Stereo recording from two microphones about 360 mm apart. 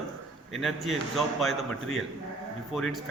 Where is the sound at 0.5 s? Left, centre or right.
Centre.